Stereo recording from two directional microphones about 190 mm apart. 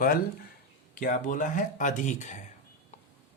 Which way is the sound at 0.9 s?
45° left (ahead or behind).